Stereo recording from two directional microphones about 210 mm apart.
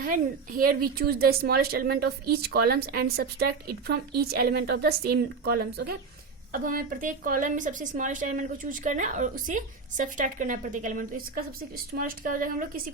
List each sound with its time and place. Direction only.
0.0 s a woman's voice: 40° right (ahead or behind)